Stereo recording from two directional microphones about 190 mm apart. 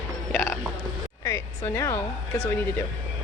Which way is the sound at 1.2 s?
15° left (ahead or behind).